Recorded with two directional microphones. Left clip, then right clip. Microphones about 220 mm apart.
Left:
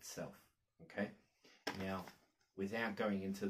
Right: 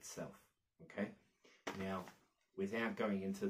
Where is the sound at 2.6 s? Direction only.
5° right (ahead or behind).